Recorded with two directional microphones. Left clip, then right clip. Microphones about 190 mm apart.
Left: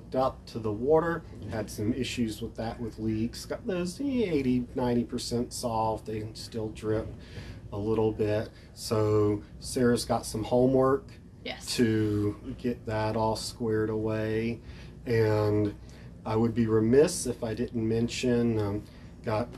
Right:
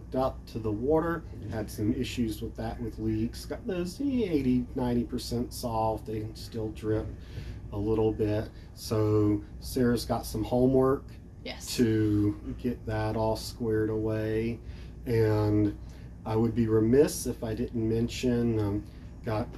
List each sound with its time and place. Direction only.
0.1 s speech: 15° left (ahead or behind)